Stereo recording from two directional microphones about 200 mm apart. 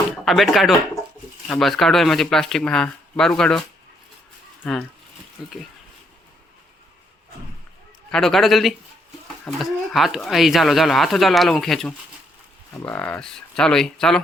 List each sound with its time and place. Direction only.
0.3 s speech: centre (ahead or behind)
4.6 s speech: 5° left (ahead or behind)
8.1 s speech: centre (ahead or behind)